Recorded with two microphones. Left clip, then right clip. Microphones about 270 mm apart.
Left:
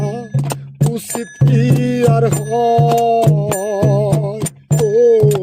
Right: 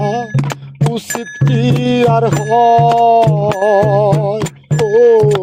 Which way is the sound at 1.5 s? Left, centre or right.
Centre.